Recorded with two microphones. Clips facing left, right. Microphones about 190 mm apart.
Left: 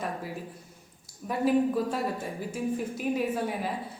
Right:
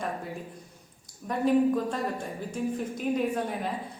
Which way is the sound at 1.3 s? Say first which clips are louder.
Right 1 dB; 5° left (ahead or behind).